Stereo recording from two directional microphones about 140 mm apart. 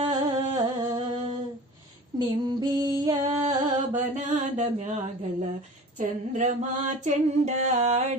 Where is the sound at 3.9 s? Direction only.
60° right (ahead or behind).